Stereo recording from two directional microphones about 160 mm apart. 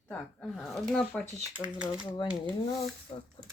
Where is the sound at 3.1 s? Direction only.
35° left (ahead or behind).